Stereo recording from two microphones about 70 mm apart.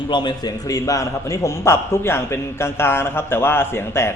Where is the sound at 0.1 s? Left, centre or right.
Left.